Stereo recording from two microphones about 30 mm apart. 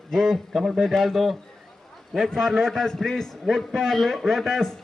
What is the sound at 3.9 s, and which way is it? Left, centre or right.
Speech, centre.